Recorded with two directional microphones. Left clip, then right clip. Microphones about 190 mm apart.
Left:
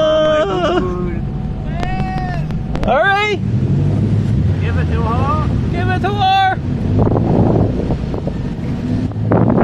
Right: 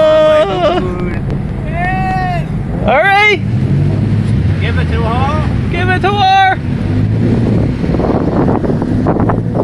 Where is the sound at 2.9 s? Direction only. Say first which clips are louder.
Right 5 dB; 10° right (ahead or behind).